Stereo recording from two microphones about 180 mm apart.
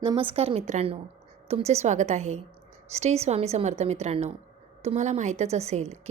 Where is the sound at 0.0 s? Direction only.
30° right (ahead or behind).